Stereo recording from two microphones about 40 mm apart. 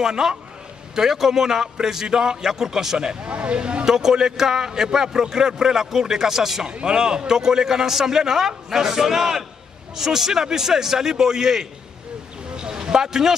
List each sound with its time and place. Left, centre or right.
0.0 s a man's voice: centre
3.9 s a man's voice: centre
6.7 s a man's voice: right
12.5 s a sound: centre